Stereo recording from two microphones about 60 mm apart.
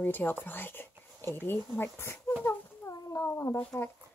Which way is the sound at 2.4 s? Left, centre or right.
Left.